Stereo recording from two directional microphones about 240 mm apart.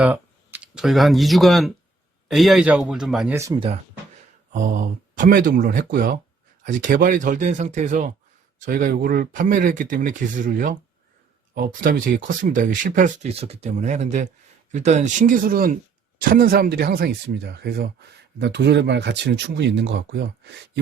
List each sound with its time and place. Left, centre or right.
0.0 s speech: centre
3.3 s speech: centre
4.5 s speech: right